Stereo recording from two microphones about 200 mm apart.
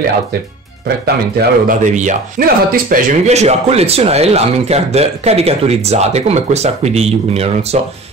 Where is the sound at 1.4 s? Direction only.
40° right (ahead or behind).